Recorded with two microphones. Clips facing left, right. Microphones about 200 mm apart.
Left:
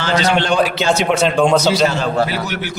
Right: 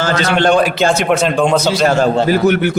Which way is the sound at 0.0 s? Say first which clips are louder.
Right 3 dB; 50° right (ahead or behind).